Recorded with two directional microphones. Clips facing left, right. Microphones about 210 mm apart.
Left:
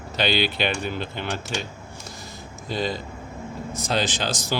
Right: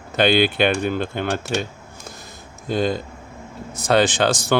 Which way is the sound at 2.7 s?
50° right (ahead or behind).